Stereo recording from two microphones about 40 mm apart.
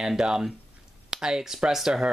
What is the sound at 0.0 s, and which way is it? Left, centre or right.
Speech, centre.